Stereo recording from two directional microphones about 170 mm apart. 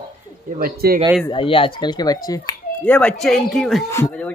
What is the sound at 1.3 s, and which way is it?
Speech, 30° left (ahead or behind).